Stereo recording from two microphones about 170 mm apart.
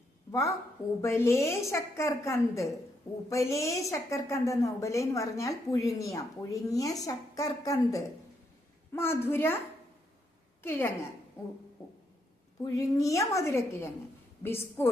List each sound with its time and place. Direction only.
0.3 s a woman's voice: 20° left (ahead or behind)
10.6 s a woman's voice: 15° left (ahead or behind)
12.6 s a woman's voice: 20° left (ahead or behind)